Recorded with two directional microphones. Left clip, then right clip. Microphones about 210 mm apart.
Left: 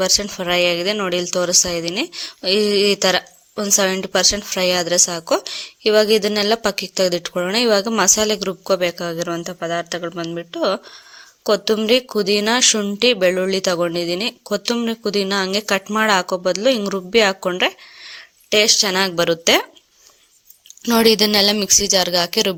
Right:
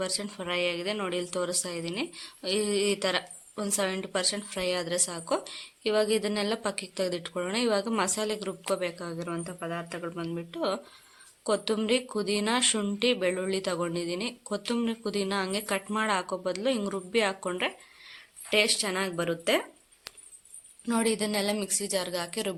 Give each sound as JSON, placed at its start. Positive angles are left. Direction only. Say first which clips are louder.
{"t": 0.0, "sound": "speech", "louder": "left 14 dB", "side_deg": 35}
{"t": 20.8, "sound": "speech", "louder": "left 14 dB", "side_deg": 45}